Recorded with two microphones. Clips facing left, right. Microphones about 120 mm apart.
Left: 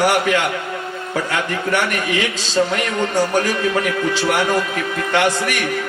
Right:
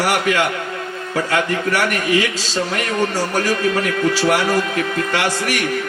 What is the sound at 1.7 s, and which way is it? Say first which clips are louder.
Speech: even; 25° left (ahead or behind).